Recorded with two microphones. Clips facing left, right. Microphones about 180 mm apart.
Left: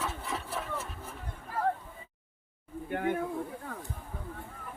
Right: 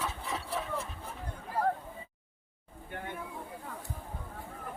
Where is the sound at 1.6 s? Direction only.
40° right (ahead or behind).